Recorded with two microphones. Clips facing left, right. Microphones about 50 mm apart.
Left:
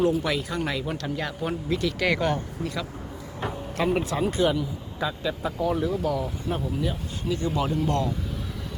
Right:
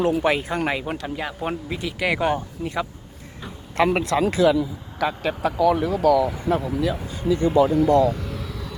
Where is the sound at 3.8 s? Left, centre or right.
Right.